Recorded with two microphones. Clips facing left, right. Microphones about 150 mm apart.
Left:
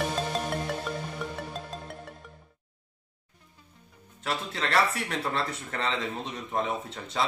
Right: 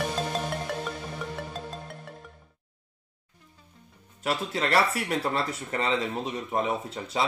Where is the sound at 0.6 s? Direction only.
Centre (ahead or behind).